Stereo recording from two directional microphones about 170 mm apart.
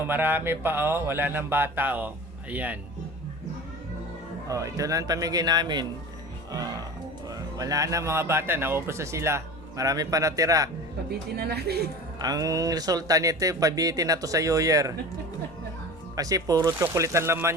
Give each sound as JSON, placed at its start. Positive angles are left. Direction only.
{"t": 0.0, "sound": "speech", "side_deg": -10}
{"t": 4.4, "sound": "a man's voice", "side_deg": -20}
{"t": 7.3, "sound": "a man's voice", "side_deg": -20}
{"t": 11.3, "sound": "a woman's voice", "side_deg": -70}
{"t": 12.2, "sound": "a man's voice", "side_deg": -20}
{"t": 16.1, "sound": "speech", "side_deg": -20}